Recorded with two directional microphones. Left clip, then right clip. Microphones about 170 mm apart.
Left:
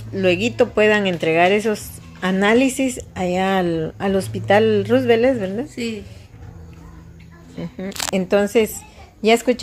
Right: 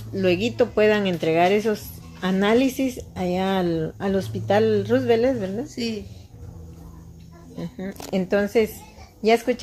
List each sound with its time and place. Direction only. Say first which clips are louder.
0.1 s speech: left 4 dB; 15° left (ahead or behind)
7.6 s a woman's voice: left 8 dB; 25° left (ahead or behind)